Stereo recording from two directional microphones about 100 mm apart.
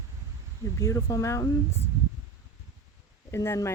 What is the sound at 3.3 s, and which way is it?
Speech, 30° left (ahead or behind).